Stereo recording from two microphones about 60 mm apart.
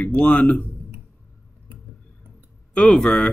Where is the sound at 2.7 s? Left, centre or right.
Centre.